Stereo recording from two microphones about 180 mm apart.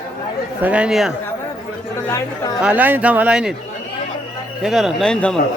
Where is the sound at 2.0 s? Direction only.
15° left (ahead or behind).